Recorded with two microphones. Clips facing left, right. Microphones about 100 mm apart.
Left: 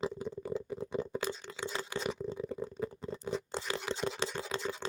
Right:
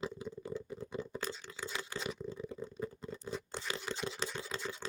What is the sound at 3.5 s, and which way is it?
Scratch, 25° left (ahead or behind).